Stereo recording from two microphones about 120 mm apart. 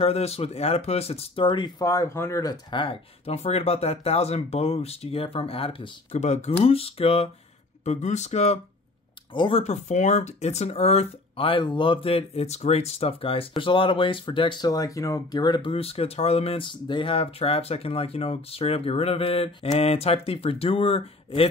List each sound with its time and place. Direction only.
0.0 s speech: 55° left (ahead or behind); by 1.9 s 40° left (ahead or behind)
1.9 s speech: 25° left (ahead or behind)
2.7 s speech: 50° left (ahead or behind)
6.1 s speech: 70° left (ahead or behind); by 7.2 s 55° left (ahead or behind)
7.8 s speech: 70° left (ahead or behind)
9.3 s speech: 40° left (ahead or behind)
9.6 s speech: 70° left (ahead or behind); by 14.7 s 45° left (ahead or behind)
14.7 s speech: 30° left (ahead or behind); by 21.5 s 55° left (ahead or behind)